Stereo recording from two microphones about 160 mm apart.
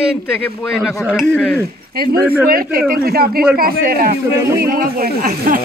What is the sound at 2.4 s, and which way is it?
Speech, 65° right (ahead or behind).